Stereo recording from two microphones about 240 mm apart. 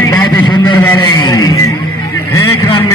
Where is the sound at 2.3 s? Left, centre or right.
Centre.